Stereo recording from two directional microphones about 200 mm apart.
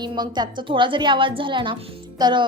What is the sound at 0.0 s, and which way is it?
A woman's voice, 20° right (ahead or behind).